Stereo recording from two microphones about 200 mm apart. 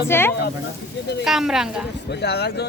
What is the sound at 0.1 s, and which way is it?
Speech, 10° left (ahead or behind).